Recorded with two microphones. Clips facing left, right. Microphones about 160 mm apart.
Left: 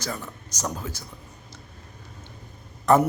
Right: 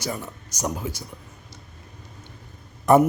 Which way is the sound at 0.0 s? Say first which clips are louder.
Right 2 dB; 10° right (ahead or behind).